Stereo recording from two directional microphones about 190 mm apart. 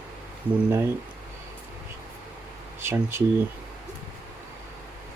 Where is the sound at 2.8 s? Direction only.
10° right (ahead or behind).